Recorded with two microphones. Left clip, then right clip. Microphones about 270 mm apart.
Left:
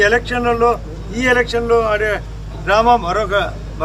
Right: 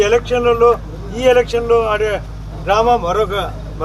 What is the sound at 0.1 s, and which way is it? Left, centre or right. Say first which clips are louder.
A man's voice: right 2 dB; centre.